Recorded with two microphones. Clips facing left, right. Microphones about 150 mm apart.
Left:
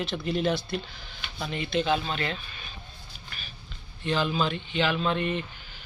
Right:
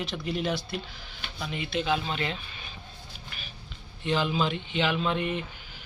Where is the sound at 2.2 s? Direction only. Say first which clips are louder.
Even; 15° right (ahead or behind).